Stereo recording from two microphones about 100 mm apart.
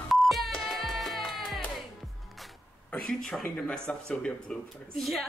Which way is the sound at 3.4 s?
10° left (ahead or behind).